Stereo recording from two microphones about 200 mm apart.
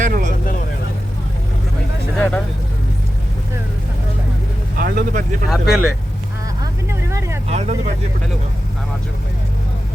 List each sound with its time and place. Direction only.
0.0 s vehicle: 40° right (ahead or behind)
2.1 s vehicle: 5° left (ahead or behind)
4.8 s speech: 45° right (ahead or behind)
5.5 s speech: centre (ahead or behind)
6.6 s a sound: 15° right (ahead or behind)
7.5 s vehicle: 35° right (ahead or behind)